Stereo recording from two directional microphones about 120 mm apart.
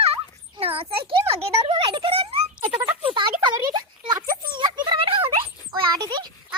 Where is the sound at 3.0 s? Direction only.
40° right (ahead or behind).